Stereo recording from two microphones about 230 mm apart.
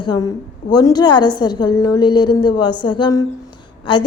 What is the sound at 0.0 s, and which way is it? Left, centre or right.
A woman's voice, centre.